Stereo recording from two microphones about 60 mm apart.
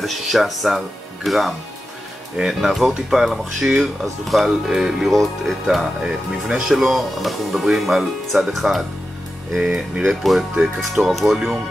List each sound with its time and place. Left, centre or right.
0.0 s speech: centre
9.7 s speech: centre
10.0 s speech: centre